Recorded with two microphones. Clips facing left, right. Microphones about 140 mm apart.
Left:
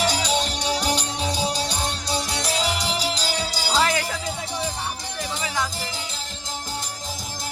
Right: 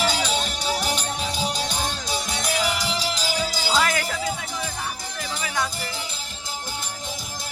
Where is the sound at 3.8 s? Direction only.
15° left (ahead or behind).